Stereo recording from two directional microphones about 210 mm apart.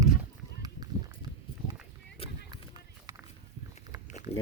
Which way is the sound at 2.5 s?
20° right (ahead or behind).